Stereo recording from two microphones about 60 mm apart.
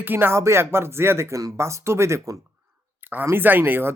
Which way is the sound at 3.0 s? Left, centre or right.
Right.